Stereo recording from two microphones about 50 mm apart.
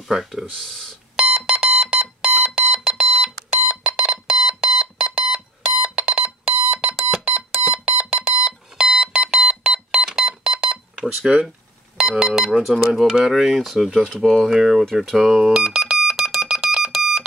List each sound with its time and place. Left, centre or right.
0.1 s speech: centre
0.6 s speech: centre
1.1 s alarm: centre
3.6 s alarm clock: right
4.3 s alarm: centre
7.3 s smoke detector: right
7.9 s alarm: right
8.5 s music: centre
10.0 s beep: centre
12.0 s speech: centre
15.7 s alarm: centre